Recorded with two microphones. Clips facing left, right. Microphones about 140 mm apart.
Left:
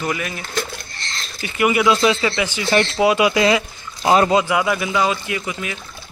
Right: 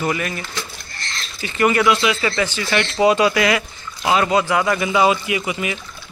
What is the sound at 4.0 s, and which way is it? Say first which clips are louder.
Speech: left 3 dB; 30° left (ahead or behind).